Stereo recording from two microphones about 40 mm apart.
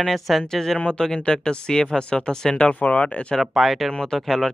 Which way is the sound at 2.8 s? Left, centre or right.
Left.